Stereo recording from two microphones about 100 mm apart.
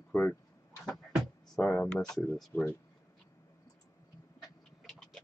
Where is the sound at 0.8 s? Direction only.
5° right (ahead or behind).